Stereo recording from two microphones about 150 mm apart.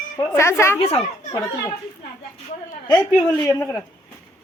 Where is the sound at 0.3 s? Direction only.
15° left (ahead or behind).